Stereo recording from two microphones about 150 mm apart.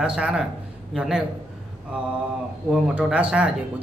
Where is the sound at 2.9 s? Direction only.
10° right (ahead or behind).